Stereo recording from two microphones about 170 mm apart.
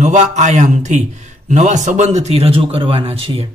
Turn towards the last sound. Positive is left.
turn(degrees=-35)  # may be behind; listen again after turning